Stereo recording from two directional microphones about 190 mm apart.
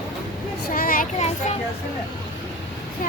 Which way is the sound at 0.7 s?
50° left (ahead or behind).